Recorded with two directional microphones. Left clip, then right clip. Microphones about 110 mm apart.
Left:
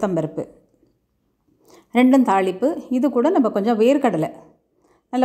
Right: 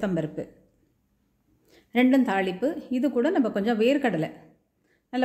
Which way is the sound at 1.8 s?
35° left (ahead or behind).